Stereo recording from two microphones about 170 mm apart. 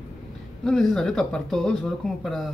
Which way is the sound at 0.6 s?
Centre (ahead or behind).